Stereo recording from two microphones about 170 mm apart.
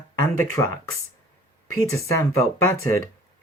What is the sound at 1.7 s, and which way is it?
Speech, 15° left (ahead or behind).